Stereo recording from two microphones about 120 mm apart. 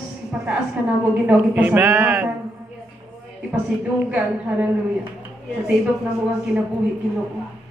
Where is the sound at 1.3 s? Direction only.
10° right (ahead or behind).